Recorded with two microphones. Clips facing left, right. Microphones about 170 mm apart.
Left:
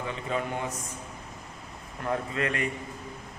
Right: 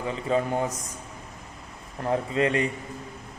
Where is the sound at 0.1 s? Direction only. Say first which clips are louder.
Right 8 dB; 35° right (ahead or behind).